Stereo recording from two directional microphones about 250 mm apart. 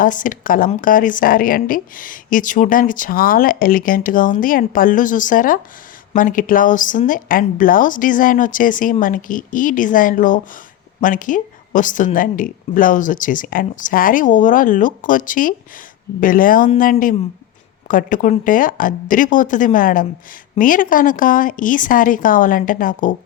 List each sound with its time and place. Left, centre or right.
0.0 s speech: left